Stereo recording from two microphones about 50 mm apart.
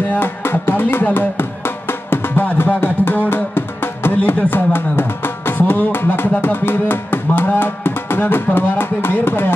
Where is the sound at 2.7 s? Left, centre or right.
Left.